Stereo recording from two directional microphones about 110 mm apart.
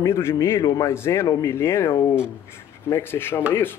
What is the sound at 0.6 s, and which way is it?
Speech, 35° left (ahead or behind).